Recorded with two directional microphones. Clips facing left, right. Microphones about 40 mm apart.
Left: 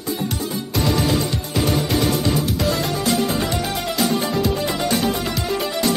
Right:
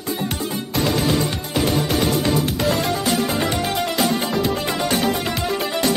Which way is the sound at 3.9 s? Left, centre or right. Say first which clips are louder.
Left 3 dB; right.